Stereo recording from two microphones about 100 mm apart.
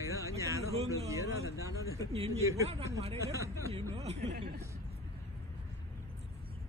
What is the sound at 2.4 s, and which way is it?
Speech, 30° right (ahead or behind).